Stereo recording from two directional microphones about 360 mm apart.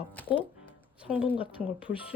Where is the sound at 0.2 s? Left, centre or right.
Centre.